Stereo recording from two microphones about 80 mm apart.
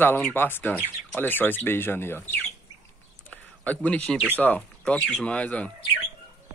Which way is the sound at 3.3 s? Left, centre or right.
Centre.